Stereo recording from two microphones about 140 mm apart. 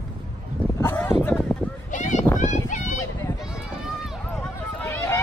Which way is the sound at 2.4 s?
60° left (ahead or behind).